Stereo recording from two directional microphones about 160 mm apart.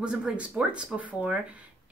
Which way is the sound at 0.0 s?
5° right (ahead or behind).